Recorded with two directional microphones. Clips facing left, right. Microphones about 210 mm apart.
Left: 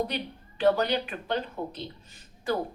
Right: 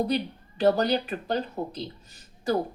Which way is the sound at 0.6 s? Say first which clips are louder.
Right 2 dB; 35° right (ahead or behind).